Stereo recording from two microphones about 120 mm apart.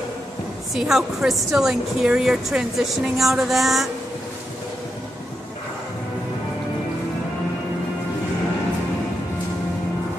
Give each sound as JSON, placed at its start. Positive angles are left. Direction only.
{"t": 0.7, "sound": "a woman's voice", "side_deg": -5}